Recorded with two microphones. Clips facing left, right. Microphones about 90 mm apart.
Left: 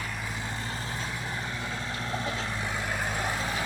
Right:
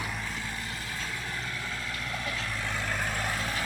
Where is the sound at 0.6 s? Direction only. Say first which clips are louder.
Left 2 dB; 30° left (ahead or behind).